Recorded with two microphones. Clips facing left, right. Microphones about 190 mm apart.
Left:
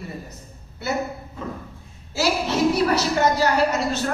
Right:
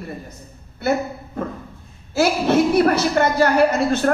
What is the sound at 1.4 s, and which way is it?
A woman's voice, 55° right (ahead or behind).